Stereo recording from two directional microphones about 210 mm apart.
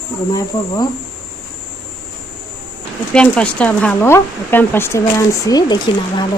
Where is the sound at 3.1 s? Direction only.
5° left (ahead or behind).